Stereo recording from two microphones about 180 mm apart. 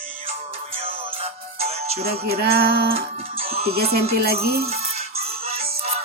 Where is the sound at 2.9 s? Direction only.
35° right (ahead or behind).